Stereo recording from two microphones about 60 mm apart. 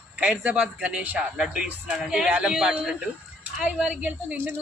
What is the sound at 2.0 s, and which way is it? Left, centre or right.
A woman's voice, centre.